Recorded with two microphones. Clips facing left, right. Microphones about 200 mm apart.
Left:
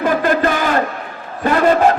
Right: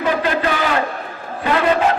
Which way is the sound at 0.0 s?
45° left (ahead or behind).